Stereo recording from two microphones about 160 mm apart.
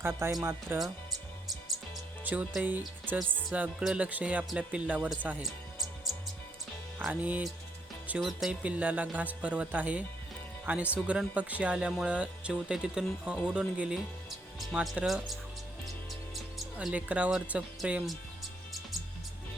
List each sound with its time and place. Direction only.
0.0 s speech: 20° right (ahead or behind)
2.2 s speech: 10° right (ahead or behind)
5.0 s music: 5° right (ahead or behind)
7.0 s speech: 10° right (ahead or behind)
16.3 s music: centre (ahead or behind)
17.5 s speech: 10° right (ahead or behind)